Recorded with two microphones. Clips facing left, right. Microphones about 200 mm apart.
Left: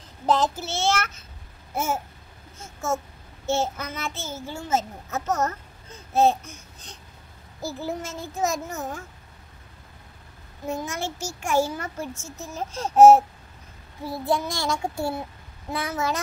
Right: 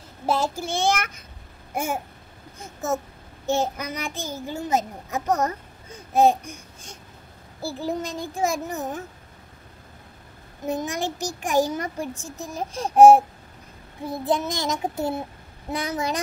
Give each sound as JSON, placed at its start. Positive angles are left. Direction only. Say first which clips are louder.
{"t": 0.3, "sound": "a child's voice", "louder": "left 1 dB", "side_deg": -10}
{"t": 1.7, "sound": "babbling", "louder": "even", "side_deg": -15}
{"t": 2.6, "sound": "a child's voice", "louder": "right 1 dB", "side_deg": -15}
{"t": 10.6, "sound": "a child's voice", "louder": "right 3 dB", "side_deg": -15}
{"t": 14.1, "sound": "child singing", "louder": "right 1 dB", "side_deg": -20}
{"t": 15.7, "sound": "a child's voice", "louder": "right 1 dB", "side_deg": -15}